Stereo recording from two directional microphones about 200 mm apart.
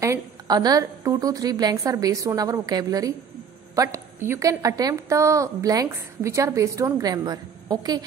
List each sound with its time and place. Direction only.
0.0 s a woman's voice: 15° right (ahead or behind)